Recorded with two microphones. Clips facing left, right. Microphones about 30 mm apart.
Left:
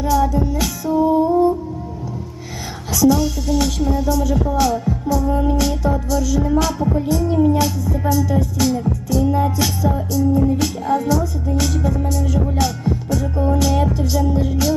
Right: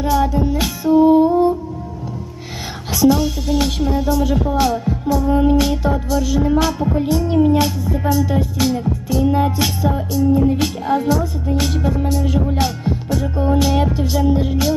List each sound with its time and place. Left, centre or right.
0.0 s music: right
2.9 s music: right